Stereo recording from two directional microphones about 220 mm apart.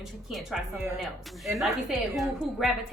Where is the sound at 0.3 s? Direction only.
Centre (ahead or behind).